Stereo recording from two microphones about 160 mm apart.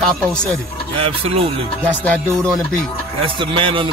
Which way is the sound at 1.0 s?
35° right (ahead or behind).